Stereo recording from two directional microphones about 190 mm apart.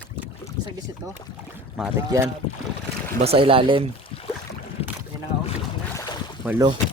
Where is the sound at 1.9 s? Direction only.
15° right (ahead or behind).